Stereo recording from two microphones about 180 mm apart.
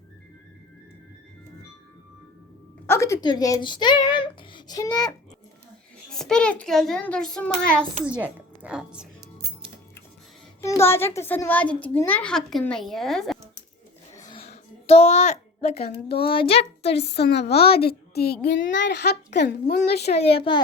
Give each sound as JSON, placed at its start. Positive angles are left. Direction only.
{"t": 2.8, "sound": "speech", "side_deg": 15}
{"t": 6.1, "sound": "a child's voice", "side_deg": 5}
{"t": 8.0, "sound": "a woman's voice", "side_deg": -10}
{"t": 10.6, "sound": "a child's voice", "side_deg": 15}
{"t": 14.3, "sound": "a sound", "side_deg": 35}
{"t": 16.2, "sound": "a child's voice", "side_deg": 30}
{"t": 17.1, "sound": "a woman's voice", "side_deg": 65}
{"t": 18.4, "sound": "a child's voice", "side_deg": 75}
{"t": 20.1, "sound": "a child's voice", "side_deg": 35}